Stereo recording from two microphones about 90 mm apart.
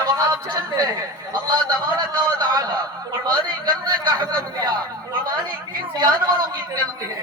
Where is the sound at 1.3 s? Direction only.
55° right (ahead or behind).